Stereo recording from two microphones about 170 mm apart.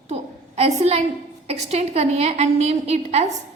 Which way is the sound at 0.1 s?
40° right (ahead or behind).